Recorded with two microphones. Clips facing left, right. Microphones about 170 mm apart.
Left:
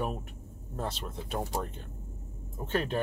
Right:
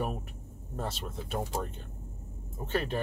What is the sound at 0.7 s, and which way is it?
Speech, centre (ahead or behind).